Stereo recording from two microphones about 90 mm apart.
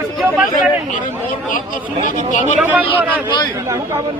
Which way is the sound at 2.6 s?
20° right (ahead or behind).